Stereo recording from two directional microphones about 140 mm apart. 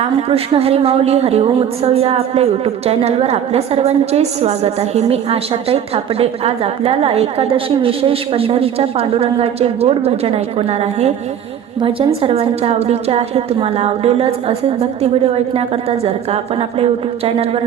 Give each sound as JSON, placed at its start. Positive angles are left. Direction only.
{"t": 0.0, "sound": "a woman's voice", "side_deg": -45}